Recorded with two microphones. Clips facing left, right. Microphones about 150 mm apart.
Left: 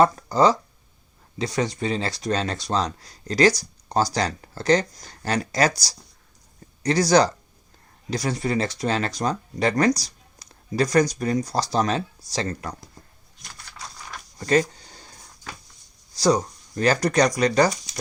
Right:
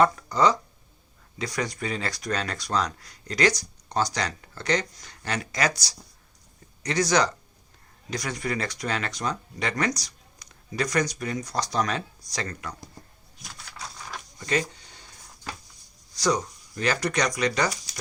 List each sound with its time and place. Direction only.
0.0 s speech: 30° left (ahead or behind)
13.4 s typing: centre (ahead or behind)
14.3 s a sound: 40° left (ahead or behind)
16.1 s speech: 35° left (ahead or behind)